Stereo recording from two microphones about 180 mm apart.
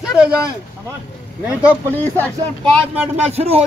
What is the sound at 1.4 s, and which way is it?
Speech, 10° right (ahead or behind).